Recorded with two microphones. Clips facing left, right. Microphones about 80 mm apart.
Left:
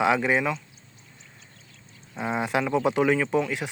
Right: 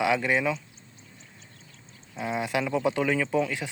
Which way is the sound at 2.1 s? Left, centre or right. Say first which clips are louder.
Left 2 dB; left.